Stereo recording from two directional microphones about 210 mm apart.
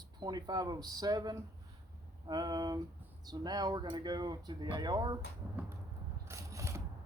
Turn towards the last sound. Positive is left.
turn(degrees=-15)  # may be behind; listen again after turning